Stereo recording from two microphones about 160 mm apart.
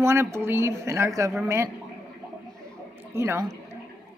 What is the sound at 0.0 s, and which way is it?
Speech, 15° right (ahead or behind).